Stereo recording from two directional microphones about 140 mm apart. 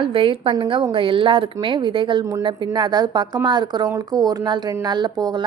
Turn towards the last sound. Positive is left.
turn(degrees=-30)  # may be behind; listen again after turning